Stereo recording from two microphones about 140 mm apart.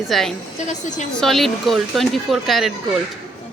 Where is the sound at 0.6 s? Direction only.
60° left (ahead or behind).